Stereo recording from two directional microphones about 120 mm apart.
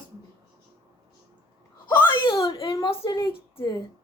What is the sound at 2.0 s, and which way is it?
Wail, 40° left (ahead or behind).